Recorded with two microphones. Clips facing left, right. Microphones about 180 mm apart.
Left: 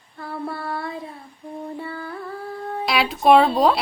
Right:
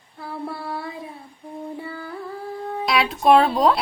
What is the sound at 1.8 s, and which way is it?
Music, 10° right (ahead or behind).